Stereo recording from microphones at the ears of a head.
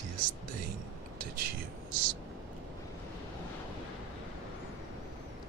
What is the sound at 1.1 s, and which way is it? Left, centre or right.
Speech, right.